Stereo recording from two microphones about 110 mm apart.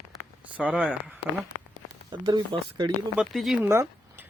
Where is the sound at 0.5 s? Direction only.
10° right (ahead or behind).